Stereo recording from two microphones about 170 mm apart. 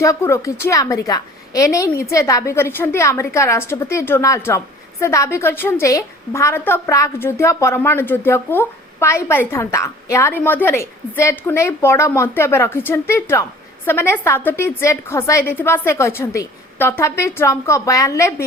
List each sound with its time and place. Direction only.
0.0 s a woman's voice: 20° left (ahead or behind)